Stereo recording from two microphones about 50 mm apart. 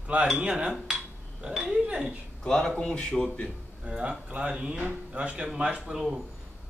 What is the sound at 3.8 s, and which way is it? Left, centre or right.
Speech, right.